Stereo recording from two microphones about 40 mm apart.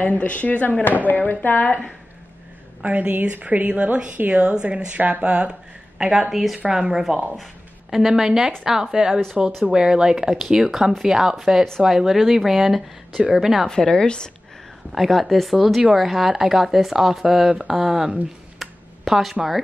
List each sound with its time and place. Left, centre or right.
0.0 s speech: left
2.8 s a woman's voice: right
5.2 s speech: right
5.9 s a woman's voice: centre
13.7 s a woman's voice: centre
14.9 s a woman's voice: centre